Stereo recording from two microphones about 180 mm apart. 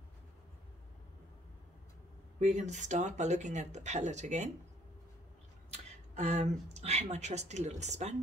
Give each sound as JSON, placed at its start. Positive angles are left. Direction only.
{"t": 2.5, "sound": "speech", "side_deg": -40}
{"t": 5.7, "sound": "speech", "side_deg": -35}